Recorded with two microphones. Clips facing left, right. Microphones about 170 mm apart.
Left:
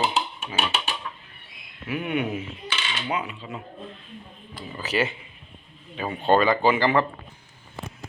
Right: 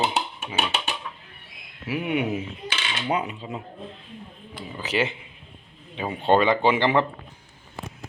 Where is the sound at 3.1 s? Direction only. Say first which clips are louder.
Right 4 dB; 40° right (ahead or behind).